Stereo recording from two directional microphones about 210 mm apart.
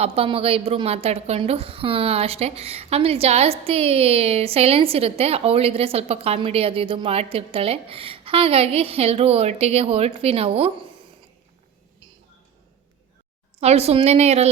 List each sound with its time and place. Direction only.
0.0 s a woman's voice: 25° right (ahead or behind)
13.6 s a woman's voice: 30° right (ahead or behind)